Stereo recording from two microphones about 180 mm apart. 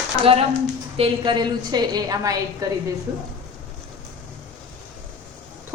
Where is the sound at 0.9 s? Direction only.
30° right (ahead or behind).